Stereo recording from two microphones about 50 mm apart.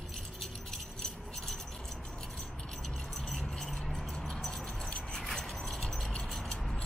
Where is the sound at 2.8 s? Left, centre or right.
Centre.